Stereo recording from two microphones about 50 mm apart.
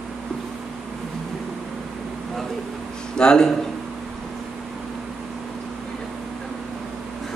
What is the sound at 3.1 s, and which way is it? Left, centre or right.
Speech, centre.